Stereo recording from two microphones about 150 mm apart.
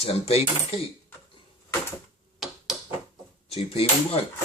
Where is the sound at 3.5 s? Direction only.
40° left (ahead or behind).